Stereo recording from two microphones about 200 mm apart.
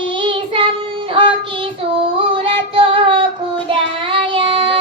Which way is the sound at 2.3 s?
25° right (ahead or behind).